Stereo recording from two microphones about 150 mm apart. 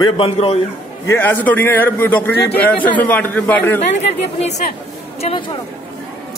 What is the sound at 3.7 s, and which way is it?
Speech, 45° left (ahead or behind).